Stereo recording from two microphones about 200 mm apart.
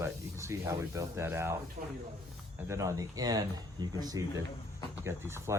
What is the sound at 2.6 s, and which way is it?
Speech, 15° right (ahead or behind).